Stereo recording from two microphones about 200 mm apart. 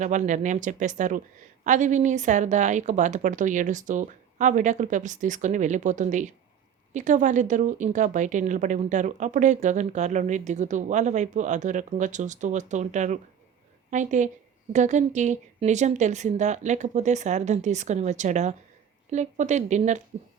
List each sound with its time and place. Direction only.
0.0 s speech: 35° right (ahead or behind)